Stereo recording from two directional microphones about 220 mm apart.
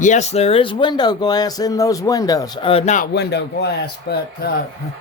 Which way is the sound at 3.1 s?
50° left (ahead or behind).